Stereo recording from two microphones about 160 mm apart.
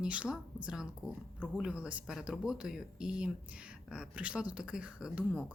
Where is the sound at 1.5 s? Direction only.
5° right (ahead or behind).